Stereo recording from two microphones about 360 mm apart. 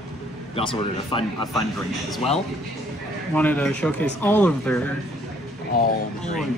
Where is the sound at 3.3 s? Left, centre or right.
Centre.